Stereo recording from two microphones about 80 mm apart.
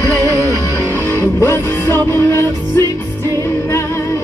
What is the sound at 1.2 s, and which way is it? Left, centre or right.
Music, left.